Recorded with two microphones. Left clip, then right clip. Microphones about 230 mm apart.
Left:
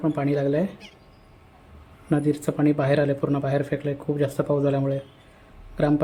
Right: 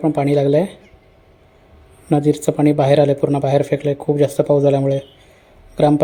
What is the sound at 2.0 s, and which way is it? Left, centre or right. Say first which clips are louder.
Speech: right 8 dB; centre.